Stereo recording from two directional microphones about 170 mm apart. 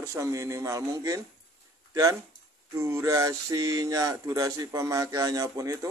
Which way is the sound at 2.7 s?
15° right (ahead or behind).